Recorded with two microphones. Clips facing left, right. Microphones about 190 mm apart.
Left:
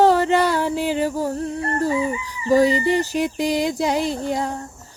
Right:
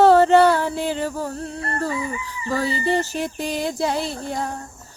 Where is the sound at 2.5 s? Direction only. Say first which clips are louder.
Left 6 dB; 15° left (ahead or behind).